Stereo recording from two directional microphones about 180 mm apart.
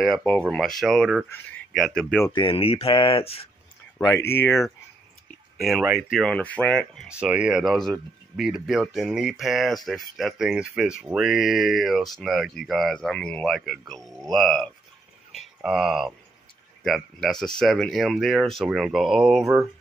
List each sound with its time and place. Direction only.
0.0 s speech: centre (ahead or behind)
2.2 s speech: 25° left (ahead or behind)
4.0 s speech: 15° left (ahead or behind)
5.6 s speech: 5° right (ahead or behind)
7.1 s speech: 5° right (ahead or behind)